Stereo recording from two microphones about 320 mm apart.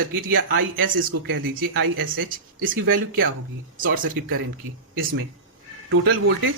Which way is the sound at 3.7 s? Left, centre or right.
Right.